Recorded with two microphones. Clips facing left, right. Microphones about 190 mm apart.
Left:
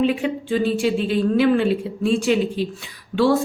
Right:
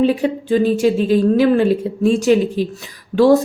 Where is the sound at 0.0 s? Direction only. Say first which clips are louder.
Right 4 dB; 40° right (ahead or behind).